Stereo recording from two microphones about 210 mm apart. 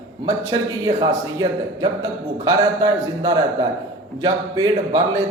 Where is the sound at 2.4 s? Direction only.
20° right (ahead or behind).